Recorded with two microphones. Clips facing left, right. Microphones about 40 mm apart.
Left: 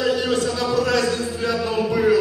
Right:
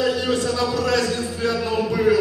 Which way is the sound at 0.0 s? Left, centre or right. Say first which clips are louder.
Left 1 dB; centre.